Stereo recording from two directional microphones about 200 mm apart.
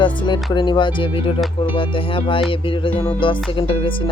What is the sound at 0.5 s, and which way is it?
Music, 25° left (ahead or behind).